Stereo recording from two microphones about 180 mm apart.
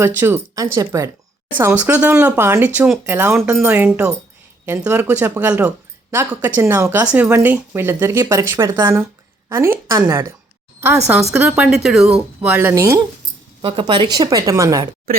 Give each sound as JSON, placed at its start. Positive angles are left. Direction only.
{"t": 0.2, "sound": "speech", "side_deg": -15}
{"t": 11.4, "sound": "speech", "side_deg": -5}
{"t": 13.6, "sound": "a woman's voice", "side_deg": -25}